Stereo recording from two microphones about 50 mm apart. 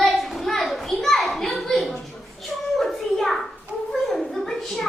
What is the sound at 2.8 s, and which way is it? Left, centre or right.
Hands, centre.